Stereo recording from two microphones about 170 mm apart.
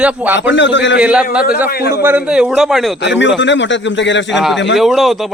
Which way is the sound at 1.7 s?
65° left (ahead or behind).